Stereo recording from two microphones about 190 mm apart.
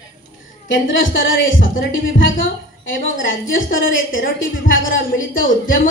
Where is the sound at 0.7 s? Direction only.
80° left.